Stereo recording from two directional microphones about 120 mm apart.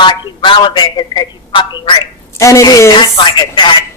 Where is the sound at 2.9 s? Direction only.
40° left (ahead or behind).